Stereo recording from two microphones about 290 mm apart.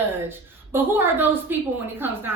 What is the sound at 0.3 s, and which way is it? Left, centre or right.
Speech, centre.